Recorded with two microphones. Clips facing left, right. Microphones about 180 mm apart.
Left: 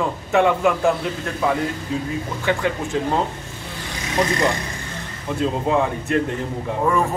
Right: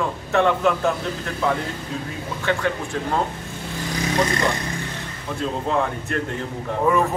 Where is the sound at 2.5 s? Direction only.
10° left (ahead or behind).